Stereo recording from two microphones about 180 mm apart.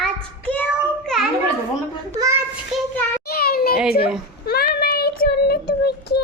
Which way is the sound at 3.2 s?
60° left (ahead or behind).